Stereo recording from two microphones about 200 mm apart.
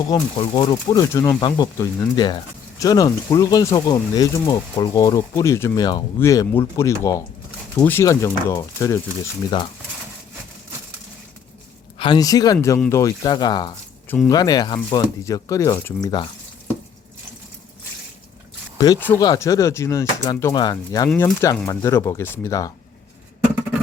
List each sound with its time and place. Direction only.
0.1 s speech: 25° left (ahead or behind)
11.9 s speech: 25° left (ahead or behind)
18.8 s speech: 15° left (ahead or behind)